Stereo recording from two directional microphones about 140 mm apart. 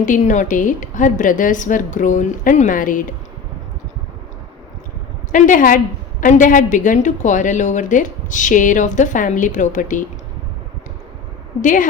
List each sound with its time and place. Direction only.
0.0 s a woman's voice: 65° left (ahead or behind)
5.3 s a woman's voice: 70° left (ahead or behind)
11.6 s a woman's voice: 70° left (ahead or behind)